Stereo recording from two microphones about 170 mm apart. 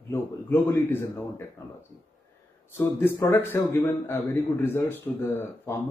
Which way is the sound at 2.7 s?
15° left (ahead or behind).